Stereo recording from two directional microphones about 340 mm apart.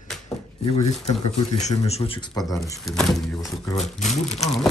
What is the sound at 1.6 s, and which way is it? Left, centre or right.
Speech, centre.